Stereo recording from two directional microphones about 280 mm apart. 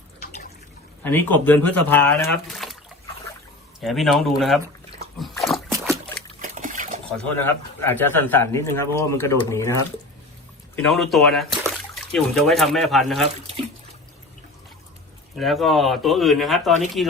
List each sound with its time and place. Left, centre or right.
1.0 s speech: centre
3.8 s speech: centre
5.2 s splash: centre
6.4 s a sound: right
7.4 s speech: centre
15.4 s speech: centre